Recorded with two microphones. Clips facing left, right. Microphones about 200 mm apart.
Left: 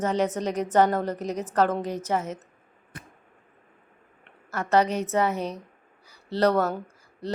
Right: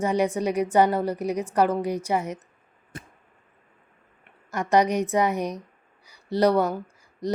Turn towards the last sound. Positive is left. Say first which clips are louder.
# right 3 dB
turn(degrees=-15)  # may be behind; listen again after turning